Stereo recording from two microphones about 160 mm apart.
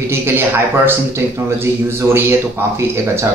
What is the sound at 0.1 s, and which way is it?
A man's voice, 15° right (ahead or behind).